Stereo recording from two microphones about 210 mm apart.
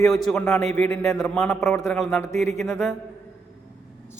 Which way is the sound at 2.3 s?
30° right (ahead or behind).